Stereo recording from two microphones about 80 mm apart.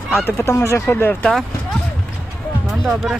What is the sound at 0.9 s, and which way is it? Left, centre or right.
Speech, left.